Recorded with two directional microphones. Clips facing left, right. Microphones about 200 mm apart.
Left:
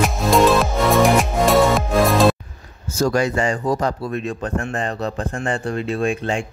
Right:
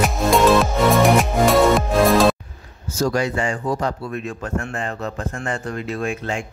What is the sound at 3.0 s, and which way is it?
Speech, 50° left (ahead or behind).